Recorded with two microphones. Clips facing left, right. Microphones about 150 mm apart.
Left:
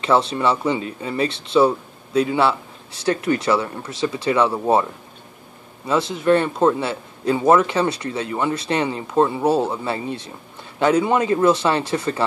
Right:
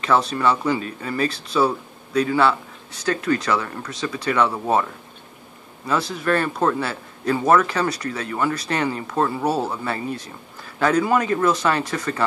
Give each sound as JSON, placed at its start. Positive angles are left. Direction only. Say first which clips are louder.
{"t": 0.0, "sound": "speech", "louder": "left 1 dB", "side_deg": 25}
{"t": 5.9, "sound": "speech", "louder": "left 4 dB", "side_deg": 25}